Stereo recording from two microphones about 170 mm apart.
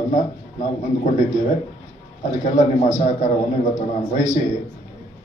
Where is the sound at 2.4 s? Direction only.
45° left (ahead or behind).